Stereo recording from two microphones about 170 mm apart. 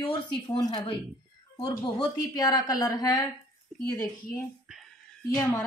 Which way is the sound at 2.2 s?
20° left (ahead or behind).